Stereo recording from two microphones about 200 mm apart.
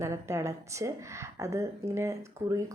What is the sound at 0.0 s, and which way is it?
Speech, 15° right (ahead or behind).